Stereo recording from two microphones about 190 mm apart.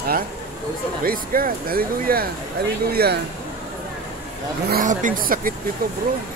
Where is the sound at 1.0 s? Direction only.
50° right (ahead or behind).